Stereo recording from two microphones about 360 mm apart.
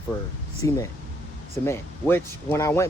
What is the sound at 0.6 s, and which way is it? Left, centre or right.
Speech, centre.